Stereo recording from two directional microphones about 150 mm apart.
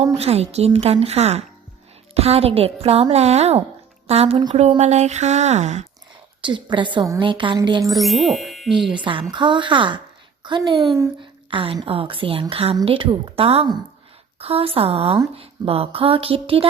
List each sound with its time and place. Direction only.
0.0 s a woman's voice: 45° right (ahead or behind)
6.4 s a woman's voice: 30° right (ahead or behind)
7.9 s speech: centre (ahead or behind)
8.9 s a woman's voice: 35° right (ahead or behind)